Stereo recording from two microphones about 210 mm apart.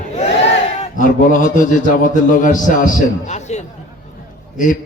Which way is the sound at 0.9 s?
40° left (ahead or behind).